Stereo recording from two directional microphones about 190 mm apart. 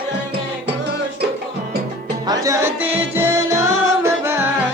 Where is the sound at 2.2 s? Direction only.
20° right (ahead or behind).